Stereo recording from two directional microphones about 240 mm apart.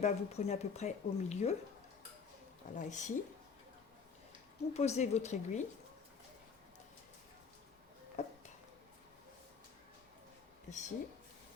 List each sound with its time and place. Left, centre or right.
0.0 s speech: left
2.7 s speech: left
4.7 s speech: left
8.2 s a sound: left
10.7 s speech: left